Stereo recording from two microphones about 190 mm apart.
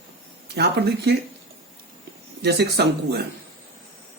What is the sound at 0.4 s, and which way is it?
Speech, 60° right (ahead or behind).